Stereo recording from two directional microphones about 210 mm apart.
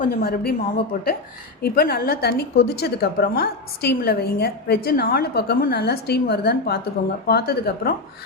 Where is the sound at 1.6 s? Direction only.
45° left (ahead or behind).